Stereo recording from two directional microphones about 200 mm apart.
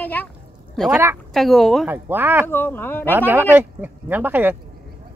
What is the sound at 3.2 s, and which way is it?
Speech, 10° right (ahead or behind).